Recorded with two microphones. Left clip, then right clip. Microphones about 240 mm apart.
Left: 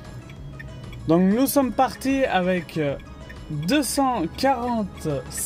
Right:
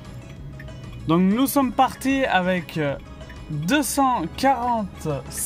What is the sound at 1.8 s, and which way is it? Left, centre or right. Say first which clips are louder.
Speech: right 1 dB; right.